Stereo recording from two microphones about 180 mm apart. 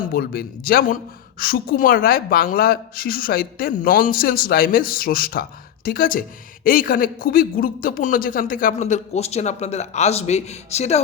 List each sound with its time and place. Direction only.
0.1 s a woman's voice: 55° left (ahead or behind); by 11.0 s 35° left (ahead or behind)